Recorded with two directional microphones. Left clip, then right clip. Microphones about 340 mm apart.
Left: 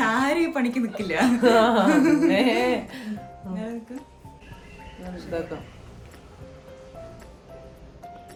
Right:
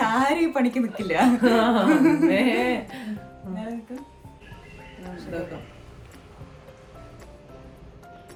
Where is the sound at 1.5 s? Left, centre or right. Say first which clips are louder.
Left 2 dB; centre.